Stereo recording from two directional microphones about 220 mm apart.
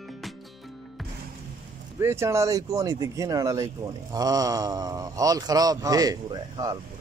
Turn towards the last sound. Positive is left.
turn(degrees=-15)  # may be behind; listen again after turning